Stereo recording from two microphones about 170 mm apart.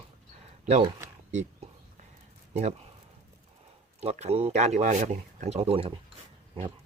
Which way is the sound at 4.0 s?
40° right (ahead or behind).